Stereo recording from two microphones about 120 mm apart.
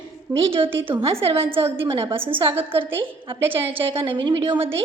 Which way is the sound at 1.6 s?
20° right (ahead or behind).